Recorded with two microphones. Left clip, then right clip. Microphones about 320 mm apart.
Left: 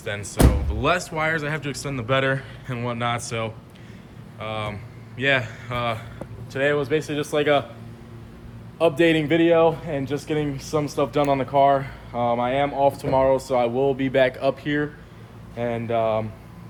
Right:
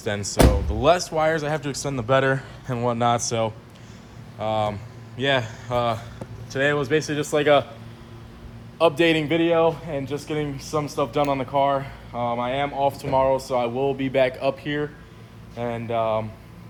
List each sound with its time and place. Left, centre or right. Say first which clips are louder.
0.0 s speech: right 3 dB; centre
8.8 s a man's voice: even; centre